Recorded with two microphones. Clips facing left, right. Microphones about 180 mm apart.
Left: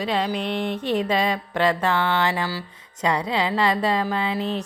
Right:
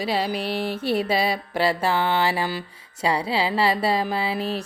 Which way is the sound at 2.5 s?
20° right (ahead or behind).